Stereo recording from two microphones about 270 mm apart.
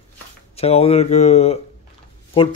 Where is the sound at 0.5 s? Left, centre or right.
Left.